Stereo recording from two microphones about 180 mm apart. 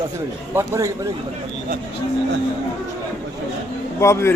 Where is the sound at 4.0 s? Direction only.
15° left (ahead or behind).